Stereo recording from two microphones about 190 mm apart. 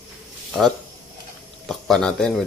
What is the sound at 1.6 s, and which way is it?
Speech, centre (ahead or behind).